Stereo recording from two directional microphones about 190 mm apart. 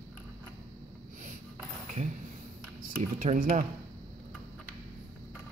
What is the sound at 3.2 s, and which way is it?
Speech, 45° right (ahead or behind).